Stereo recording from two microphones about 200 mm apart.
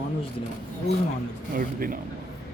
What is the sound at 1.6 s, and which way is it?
Speech, 45° right (ahead or behind).